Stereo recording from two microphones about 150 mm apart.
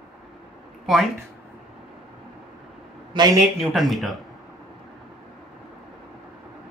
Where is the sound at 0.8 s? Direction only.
Centre (ahead or behind).